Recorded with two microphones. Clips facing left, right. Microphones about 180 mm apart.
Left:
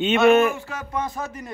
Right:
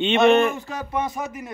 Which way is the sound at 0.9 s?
20° right (ahead or behind).